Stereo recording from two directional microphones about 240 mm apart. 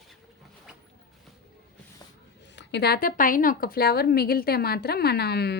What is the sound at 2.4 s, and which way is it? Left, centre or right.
Speech, left.